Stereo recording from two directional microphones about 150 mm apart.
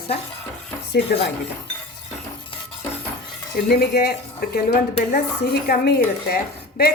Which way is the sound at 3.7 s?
90° left.